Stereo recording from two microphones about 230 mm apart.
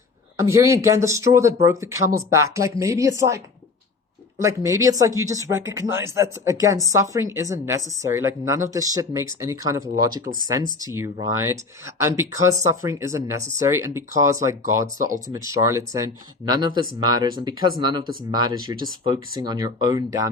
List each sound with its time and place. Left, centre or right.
0.3 s speech: centre
15.3 s speech: centre